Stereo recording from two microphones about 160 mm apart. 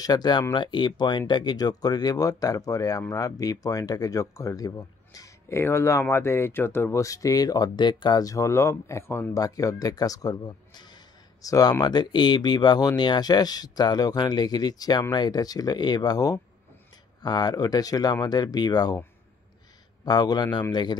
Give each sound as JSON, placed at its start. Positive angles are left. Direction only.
{"t": 0.0, "sound": "speech", "side_deg": 25}
{"t": 20.1, "sound": "speech", "side_deg": 25}